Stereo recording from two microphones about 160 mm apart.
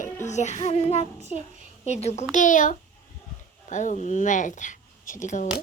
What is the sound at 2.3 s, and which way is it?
A woman's voice, 55° left (ahead or behind).